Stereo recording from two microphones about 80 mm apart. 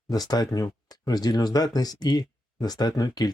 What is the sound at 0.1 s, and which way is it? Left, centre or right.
Speech, left.